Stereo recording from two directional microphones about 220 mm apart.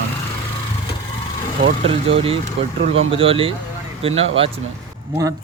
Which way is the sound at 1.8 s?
25° right (ahead or behind).